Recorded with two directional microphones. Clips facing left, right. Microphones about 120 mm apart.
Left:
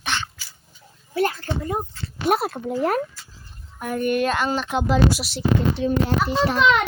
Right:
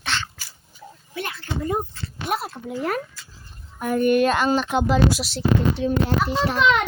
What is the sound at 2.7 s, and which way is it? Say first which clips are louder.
Speech: left 3 dB; 40° left (ahead or behind).